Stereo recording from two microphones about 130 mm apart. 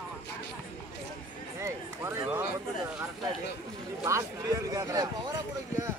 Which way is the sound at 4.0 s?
25° right (ahead or behind).